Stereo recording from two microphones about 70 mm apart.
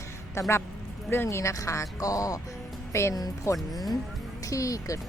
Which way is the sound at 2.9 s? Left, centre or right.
Left.